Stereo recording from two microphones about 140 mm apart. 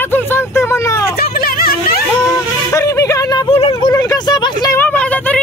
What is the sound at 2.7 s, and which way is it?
Speech, 20° left (ahead or behind).